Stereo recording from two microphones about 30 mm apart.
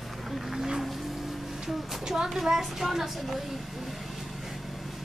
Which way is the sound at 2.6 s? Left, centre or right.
Centre.